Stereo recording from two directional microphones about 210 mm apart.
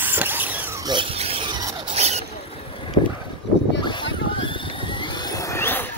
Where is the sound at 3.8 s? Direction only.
20° left (ahead or behind).